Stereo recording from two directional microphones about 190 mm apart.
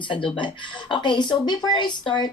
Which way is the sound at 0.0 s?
25° left (ahead or behind).